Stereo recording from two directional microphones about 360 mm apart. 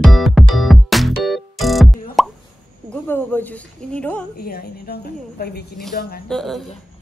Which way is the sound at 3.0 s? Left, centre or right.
Centre.